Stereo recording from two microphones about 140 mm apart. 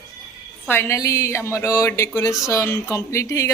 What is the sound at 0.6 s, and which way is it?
A woman's voice, 15° left (ahead or behind).